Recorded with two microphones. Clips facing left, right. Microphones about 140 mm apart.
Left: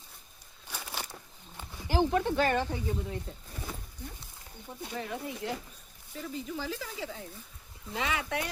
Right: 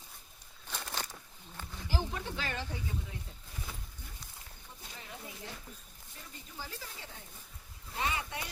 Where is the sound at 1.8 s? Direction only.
65° left (ahead or behind).